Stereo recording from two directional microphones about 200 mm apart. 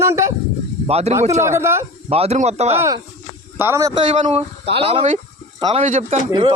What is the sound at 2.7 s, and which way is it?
A man's voice, 15° right (ahead or behind).